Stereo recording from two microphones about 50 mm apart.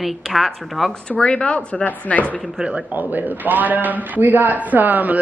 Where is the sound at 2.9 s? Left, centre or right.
Right.